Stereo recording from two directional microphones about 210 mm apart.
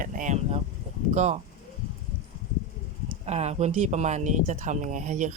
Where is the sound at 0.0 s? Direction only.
35° right (ahead or behind).